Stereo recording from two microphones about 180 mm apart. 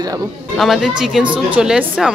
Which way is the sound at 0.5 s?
Centre (ahead or behind).